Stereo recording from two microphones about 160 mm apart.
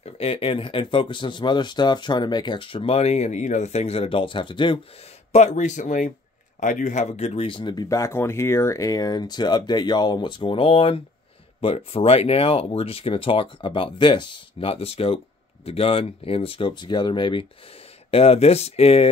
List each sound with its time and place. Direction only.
0.0 s speech: 35° left (ahead or behind)
5.3 s speech: 45° left (ahead or behind)